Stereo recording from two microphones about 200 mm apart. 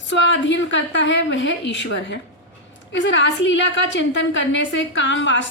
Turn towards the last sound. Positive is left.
turn(degrees=65)  # may be behind; listen again after turning